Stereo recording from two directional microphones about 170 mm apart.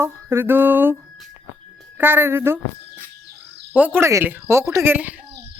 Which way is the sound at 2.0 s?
10° right (ahead or behind).